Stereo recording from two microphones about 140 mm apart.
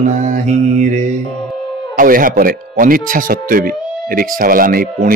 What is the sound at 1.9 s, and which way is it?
Speech, 85° right.